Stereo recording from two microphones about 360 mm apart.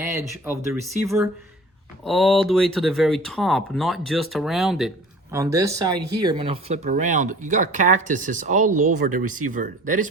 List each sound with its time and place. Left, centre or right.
0.7 s speech: centre; by 10.1 s right